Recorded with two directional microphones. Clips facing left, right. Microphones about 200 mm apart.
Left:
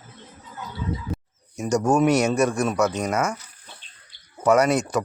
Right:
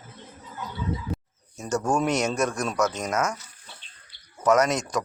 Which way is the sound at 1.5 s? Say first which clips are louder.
Left 5 dB; 10° left (ahead or behind).